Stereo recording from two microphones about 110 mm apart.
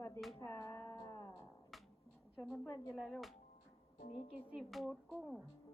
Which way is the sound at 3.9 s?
70° left (ahead or behind).